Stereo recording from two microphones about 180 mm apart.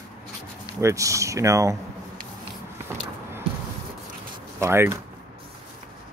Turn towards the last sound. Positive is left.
turn(degrees=-15)  # may be behind; listen again after turning